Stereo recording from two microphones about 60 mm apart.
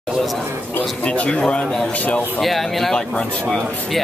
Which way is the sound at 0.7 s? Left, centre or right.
Left.